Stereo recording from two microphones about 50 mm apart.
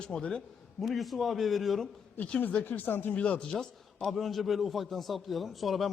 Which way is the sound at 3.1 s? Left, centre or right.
Left.